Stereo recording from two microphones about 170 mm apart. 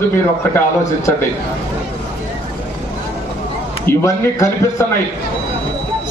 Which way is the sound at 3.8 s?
15° left (ahead or behind).